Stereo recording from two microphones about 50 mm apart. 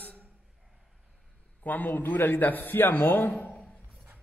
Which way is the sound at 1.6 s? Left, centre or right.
Left.